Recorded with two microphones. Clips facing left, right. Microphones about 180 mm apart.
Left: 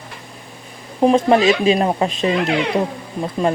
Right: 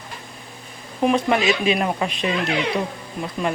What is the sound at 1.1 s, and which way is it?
Speech, 35° left (ahead or behind).